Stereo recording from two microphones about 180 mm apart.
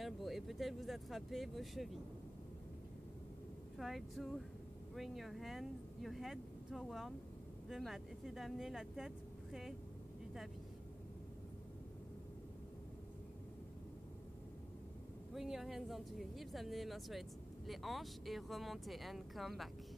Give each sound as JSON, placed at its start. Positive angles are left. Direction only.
{"t": 0.0, "sound": "speech", "side_deg": 0}
{"t": 3.7, "sound": "speech", "side_deg": 0}
{"t": 15.3, "sound": "speech", "side_deg": 0}